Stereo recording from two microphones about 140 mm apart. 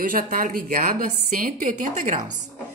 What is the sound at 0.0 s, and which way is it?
A woman's voice, 85° right.